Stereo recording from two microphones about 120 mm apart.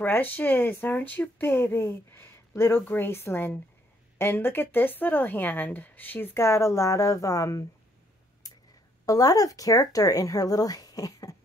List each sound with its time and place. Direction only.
0.0 s speech: 15° left (ahead or behind)
8.4 s a sound: 30° left (ahead or behind)
9.0 s speech: 30° left (ahead or behind)